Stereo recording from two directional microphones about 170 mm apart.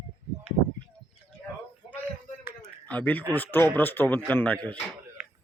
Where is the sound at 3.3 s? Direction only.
10° left (ahead or behind).